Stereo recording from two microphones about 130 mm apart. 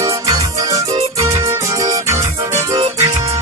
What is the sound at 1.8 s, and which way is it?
Music, 25° right (ahead or behind).